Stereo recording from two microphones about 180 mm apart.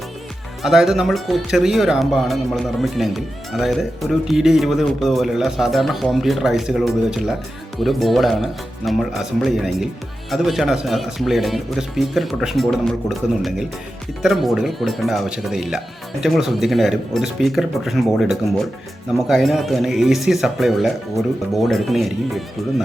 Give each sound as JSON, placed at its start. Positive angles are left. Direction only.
{"t": 0.6, "sound": "speech", "side_deg": 0}